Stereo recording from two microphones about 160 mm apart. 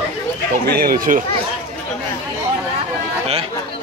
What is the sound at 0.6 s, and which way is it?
Speech, 70° right (ahead or behind).